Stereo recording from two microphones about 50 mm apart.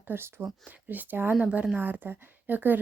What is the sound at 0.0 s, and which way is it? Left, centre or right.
Speech, right.